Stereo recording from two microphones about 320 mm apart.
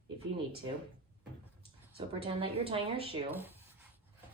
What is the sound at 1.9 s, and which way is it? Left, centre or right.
Speech, centre.